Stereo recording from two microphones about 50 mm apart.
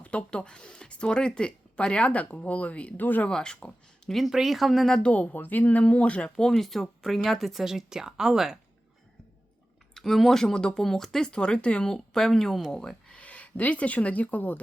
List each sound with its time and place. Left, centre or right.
0.0 s speech: left
3.0 s speech: left
3.2 s speech: centre
4.3 s speech: centre
5.0 s speech: left
6.4 s speech: centre
9.9 s speech: centre
13.1 s speech: left